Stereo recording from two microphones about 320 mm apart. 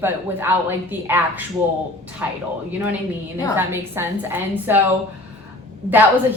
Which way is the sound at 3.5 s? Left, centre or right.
Centre.